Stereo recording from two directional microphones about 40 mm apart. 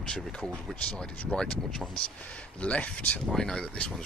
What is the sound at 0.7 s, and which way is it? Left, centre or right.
Speech, left.